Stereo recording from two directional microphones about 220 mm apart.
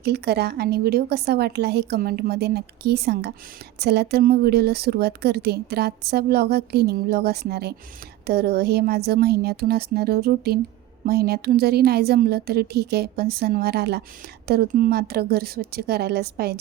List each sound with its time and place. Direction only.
0.0 s a woman's voice: 50° right (ahead or behind)